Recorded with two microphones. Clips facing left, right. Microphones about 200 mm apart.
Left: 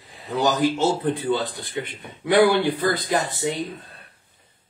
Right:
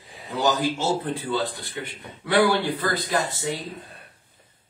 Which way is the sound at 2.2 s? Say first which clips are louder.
Left 3 dB; 15° left (ahead or behind).